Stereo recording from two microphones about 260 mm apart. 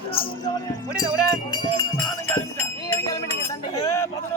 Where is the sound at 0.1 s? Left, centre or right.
Left.